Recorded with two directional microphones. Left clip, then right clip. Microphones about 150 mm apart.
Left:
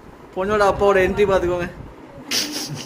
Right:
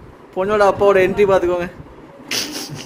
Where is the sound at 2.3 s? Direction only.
25° right (ahead or behind).